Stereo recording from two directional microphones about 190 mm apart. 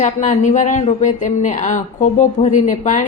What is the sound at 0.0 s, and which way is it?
A woman's voice, 40° left (ahead or behind).